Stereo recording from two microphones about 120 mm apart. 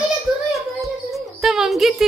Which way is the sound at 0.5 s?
Centre (ahead or behind).